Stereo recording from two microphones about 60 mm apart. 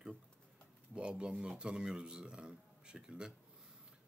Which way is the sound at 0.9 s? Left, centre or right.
Centre.